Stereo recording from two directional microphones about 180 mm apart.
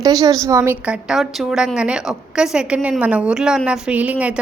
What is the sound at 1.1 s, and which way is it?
A woman's voice, 5° right (ahead or behind).